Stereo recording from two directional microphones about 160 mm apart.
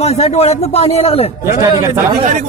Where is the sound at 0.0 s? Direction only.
40° left (ahead or behind).